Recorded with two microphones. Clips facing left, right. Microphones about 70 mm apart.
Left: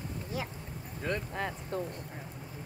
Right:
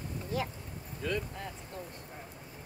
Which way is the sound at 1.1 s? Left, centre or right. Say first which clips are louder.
Even; left.